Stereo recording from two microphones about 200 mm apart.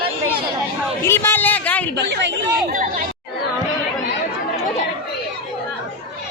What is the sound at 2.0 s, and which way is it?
Speech, 60° right (ahead or behind).